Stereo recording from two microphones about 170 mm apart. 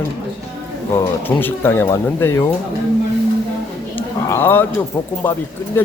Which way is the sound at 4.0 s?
15° left (ahead or behind).